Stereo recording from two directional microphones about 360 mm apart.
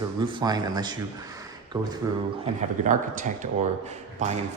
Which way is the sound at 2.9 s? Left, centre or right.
Right.